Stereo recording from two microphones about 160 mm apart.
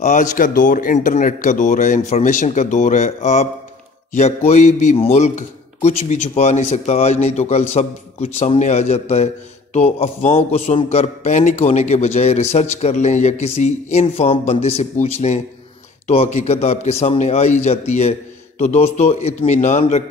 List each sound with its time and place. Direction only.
0.0 s a man's voice: 50° left (ahead or behind)
4.5 s a man's voice: 50° left (ahead or behind)
4.9 s a man's voice: 40° left (ahead or behind)